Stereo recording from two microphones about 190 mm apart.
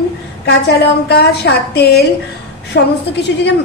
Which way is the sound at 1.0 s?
60° left (ahead or behind).